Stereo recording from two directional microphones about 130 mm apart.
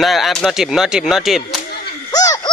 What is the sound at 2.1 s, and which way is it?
Baby laughter, 30° left (ahead or behind).